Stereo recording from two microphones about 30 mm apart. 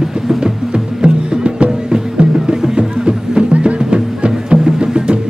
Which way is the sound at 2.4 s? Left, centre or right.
Right.